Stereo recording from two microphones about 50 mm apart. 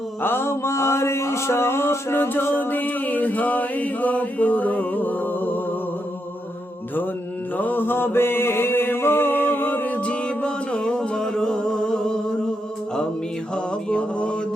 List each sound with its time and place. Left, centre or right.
0.2 s mantra: left
2.4 s a capella: left
7.5 s mantra: left
10.0 s music: left
13.6 s mantra: centre